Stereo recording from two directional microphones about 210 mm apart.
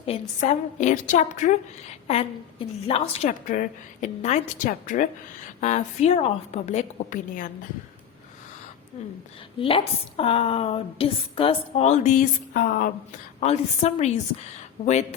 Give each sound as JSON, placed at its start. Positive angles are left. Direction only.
{"t": 0.0, "sound": "a woman's voice", "side_deg": 30}
{"t": 9.6, "sound": "a woman's voice", "side_deg": 25}